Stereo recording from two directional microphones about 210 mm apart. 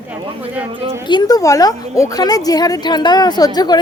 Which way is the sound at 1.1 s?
20° left (ahead or behind).